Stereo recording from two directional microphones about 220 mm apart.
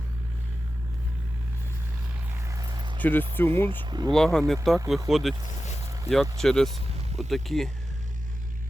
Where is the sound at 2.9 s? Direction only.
10° left (ahead or behind).